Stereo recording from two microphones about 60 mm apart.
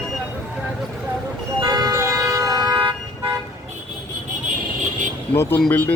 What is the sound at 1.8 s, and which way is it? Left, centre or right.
Siren, right.